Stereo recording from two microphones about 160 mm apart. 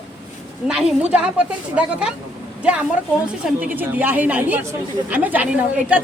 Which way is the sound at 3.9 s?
10° right (ahead or behind).